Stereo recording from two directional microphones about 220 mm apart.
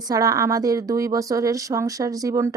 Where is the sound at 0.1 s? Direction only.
15° right (ahead or behind).